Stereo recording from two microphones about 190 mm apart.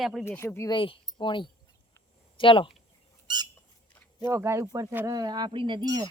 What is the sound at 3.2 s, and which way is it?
Squawk, 20° right (ahead or behind).